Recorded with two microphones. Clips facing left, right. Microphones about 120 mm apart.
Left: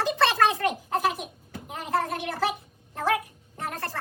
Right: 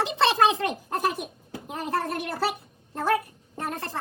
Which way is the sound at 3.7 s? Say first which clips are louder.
Right 1 dB; 20° right (ahead or behind).